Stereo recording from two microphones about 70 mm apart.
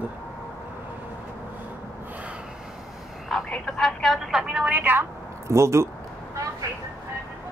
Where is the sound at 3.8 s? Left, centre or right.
Centre.